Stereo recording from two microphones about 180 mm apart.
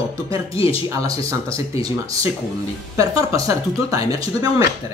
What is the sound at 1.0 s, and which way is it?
Speech, 20° right (ahead or behind).